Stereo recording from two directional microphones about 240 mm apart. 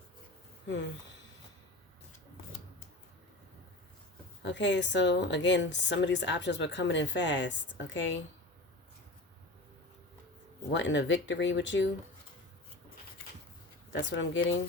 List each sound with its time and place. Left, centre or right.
4.4 s speech: left
10.7 s speech: left
13.9 s speech: left